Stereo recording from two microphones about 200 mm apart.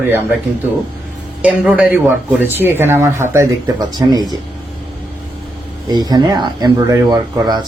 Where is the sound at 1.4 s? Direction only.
5° right (ahead or behind).